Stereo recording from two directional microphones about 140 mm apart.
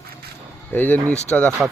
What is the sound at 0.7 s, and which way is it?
Speech, 15° left (ahead or behind).